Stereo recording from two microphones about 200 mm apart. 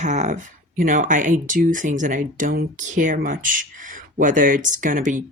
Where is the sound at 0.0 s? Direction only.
35° right (ahead or behind).